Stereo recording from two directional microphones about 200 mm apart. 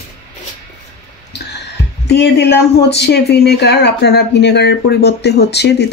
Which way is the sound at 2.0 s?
55° left (ahead or behind).